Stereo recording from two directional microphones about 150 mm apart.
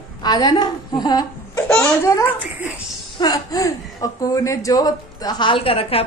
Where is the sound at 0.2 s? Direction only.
30° left (ahead or behind).